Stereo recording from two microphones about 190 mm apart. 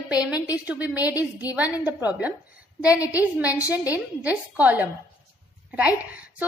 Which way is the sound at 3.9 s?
10° right (ahead or behind).